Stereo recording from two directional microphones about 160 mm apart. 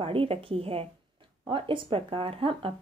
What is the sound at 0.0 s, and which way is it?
A woman's voice, 35° right (ahead or behind).